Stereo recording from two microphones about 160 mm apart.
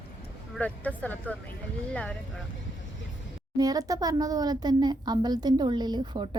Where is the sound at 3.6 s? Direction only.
25° right (ahead or behind).